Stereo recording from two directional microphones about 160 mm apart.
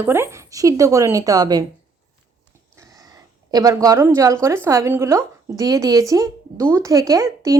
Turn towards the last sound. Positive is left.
turn(degrees=-20)  # may be behind; listen again after turning